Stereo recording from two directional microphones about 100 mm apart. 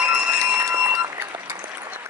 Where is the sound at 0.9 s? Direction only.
25° right (ahead or behind).